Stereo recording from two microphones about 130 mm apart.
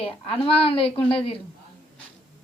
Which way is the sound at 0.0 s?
45° left (ahead or behind).